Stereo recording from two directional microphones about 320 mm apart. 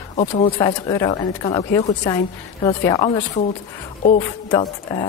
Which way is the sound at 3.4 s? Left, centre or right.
Left.